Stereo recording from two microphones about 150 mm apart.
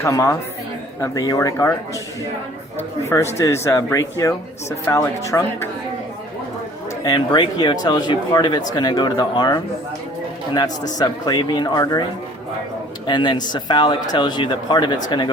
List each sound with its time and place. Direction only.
0.0 s speech: 20° left (ahead or behind)
3.1 s speech: 20° left (ahead or behind)
7.0 s speech: 25° left (ahead or behind)
10.9 s speech: 30° left (ahead or behind)
13.1 s speech: 30° left (ahead or behind)